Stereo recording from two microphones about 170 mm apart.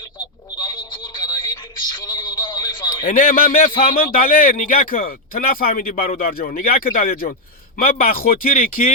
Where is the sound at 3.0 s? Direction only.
55° left (ahead or behind).